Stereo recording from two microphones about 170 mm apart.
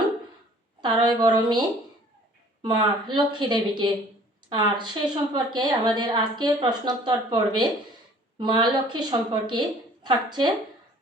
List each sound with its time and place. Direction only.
0.8 s a woman's voice: 25° right (ahead or behind)